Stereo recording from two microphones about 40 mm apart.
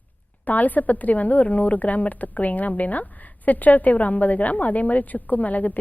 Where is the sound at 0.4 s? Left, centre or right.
Left.